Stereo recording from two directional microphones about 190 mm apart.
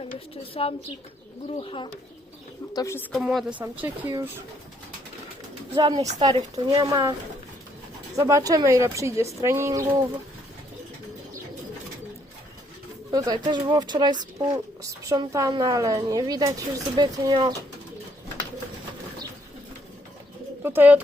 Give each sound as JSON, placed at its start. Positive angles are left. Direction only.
{"t": 0.6, "sound": "speech", "side_deg": 30}
{"t": 2.7, "sound": "a woman's voice", "side_deg": 15}
{"t": 3.1, "sound": "a woman's voice", "side_deg": 0}
{"t": 3.8, "sound": "a woman's voice", "side_deg": -15}
{"t": 5.7, "sound": "a woman's voice", "side_deg": -25}
{"t": 13.1, "sound": "a woman's voice", "side_deg": -20}
{"t": 20.6, "sound": "speech", "side_deg": -10}